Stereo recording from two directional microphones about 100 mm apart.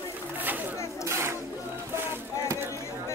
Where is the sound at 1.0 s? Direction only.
25° right (ahead or behind).